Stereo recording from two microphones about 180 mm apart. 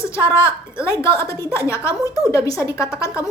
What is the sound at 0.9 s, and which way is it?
A woman's voice, 15° left (ahead or behind).